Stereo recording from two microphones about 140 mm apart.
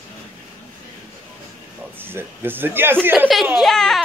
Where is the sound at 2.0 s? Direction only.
15° right (ahead or behind).